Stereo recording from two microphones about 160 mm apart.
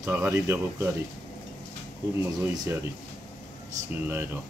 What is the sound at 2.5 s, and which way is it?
Speech, 25° right (ahead or behind).